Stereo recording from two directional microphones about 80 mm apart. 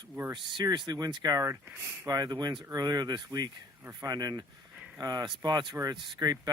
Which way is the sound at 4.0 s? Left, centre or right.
Right.